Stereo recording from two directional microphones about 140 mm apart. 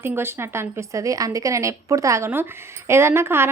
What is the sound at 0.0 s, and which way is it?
A woman's voice, 15° right (ahead or behind).